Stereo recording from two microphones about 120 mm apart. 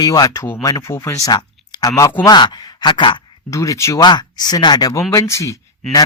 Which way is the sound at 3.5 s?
25° left (ahead or behind).